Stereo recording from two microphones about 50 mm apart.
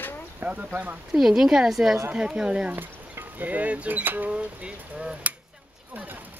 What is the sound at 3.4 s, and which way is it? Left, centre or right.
Speech, right.